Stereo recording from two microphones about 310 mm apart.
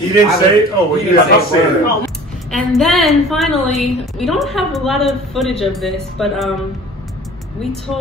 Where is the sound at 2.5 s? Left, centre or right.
Centre.